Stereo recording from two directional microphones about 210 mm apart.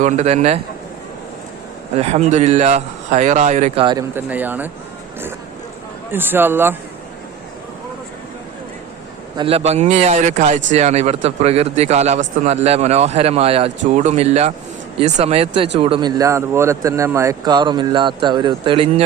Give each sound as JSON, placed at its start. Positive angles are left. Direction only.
{"t": 0.0, "sound": "a man's voice", "side_deg": -35}
{"t": 2.0, "sound": "a man's voice", "side_deg": -30}
{"t": 3.8, "sound": "speech", "side_deg": -15}
{"t": 6.1, "sound": "speech", "side_deg": -10}
{"t": 9.3, "sound": "a man's voice", "side_deg": -25}